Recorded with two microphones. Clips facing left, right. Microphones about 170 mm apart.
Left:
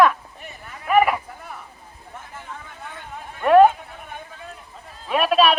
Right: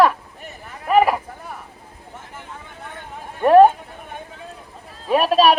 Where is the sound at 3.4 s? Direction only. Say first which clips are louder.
Right 2 dB; 35° right (ahead or behind).